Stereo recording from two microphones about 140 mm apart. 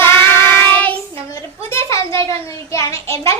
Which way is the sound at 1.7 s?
20° left (ahead or behind).